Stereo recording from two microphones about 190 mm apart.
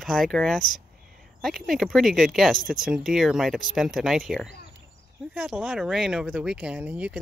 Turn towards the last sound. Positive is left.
turn(degrees=-5)  # may be behind; listen again after turning